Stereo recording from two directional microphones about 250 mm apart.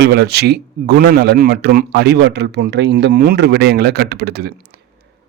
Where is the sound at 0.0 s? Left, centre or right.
Right.